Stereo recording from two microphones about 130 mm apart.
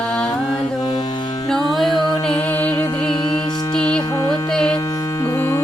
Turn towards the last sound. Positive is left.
turn(degrees=20)  # may be behind; listen again after turning